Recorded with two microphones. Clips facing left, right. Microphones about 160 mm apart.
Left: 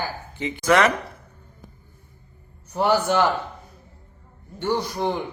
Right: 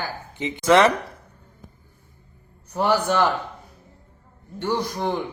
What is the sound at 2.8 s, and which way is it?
Speech, 10° left (ahead or behind).